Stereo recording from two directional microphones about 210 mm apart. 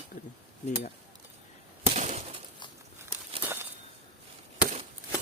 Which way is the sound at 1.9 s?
35° right (ahead or behind).